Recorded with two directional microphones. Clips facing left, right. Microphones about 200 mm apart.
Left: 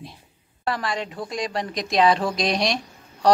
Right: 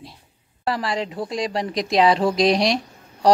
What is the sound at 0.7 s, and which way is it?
A woman's voice, 30° right (ahead or behind).